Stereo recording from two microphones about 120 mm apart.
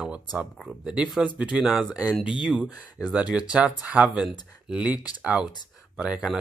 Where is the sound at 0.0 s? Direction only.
10° right (ahead or behind).